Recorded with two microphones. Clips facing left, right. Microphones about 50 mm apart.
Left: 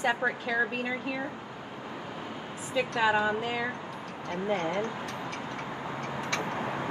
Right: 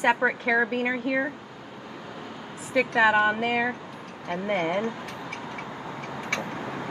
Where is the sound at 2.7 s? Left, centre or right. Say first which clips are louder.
Right 6 dB; right.